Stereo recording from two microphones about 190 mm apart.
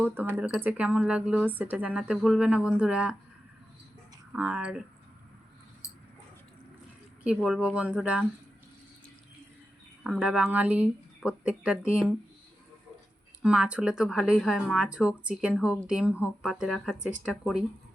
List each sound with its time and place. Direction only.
0.1 s speech: 10° right (ahead or behind)
4.3 s speech: 5° right (ahead or behind)
5.8 s a sound: 15° left (ahead or behind)
7.4 s speech: 5° right (ahead or behind)
10.0 s speech: 5° right (ahead or behind)
13.4 s speech: 5° right (ahead or behind)